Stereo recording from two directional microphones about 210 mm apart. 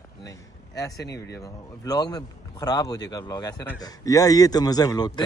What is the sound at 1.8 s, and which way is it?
Speech, 20° left (ahead or behind).